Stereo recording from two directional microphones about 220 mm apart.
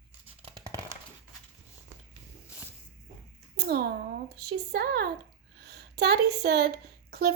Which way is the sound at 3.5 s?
45° right (ahead or behind).